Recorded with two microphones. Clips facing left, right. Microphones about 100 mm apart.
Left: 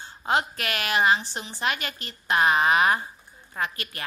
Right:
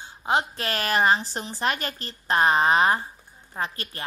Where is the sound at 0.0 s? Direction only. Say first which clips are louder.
Right 1 dB; 20° right (ahead or behind).